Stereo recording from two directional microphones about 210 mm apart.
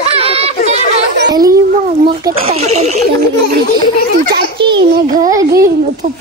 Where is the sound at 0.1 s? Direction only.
30° right (ahead or behind).